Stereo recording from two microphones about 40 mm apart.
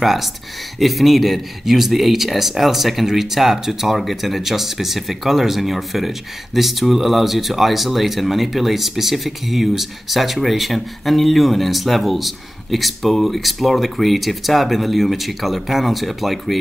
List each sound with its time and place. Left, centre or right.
0.0 s speech: centre